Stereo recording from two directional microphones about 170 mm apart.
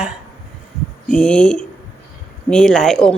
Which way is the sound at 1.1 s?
5° left (ahead or behind).